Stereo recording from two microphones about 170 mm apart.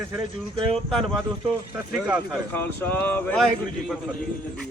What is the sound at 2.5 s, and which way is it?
Speech, 10° left (ahead or behind).